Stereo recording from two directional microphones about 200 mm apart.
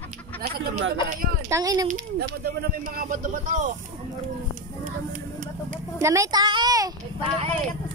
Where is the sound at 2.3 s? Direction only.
50° right (ahead or behind).